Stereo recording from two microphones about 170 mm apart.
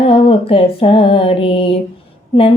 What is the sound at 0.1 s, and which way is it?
Female singing, 30° left (ahead or behind).